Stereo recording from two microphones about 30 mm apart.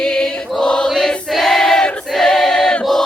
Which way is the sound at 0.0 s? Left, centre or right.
Left.